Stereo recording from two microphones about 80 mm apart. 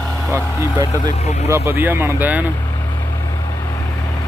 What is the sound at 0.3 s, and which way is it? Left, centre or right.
Speech, right.